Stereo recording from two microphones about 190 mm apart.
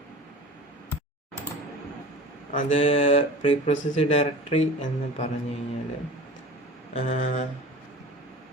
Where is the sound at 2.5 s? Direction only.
40° left (ahead or behind).